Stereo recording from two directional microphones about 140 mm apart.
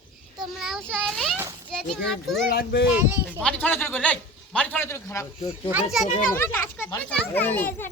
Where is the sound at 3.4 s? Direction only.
10° left (ahead or behind).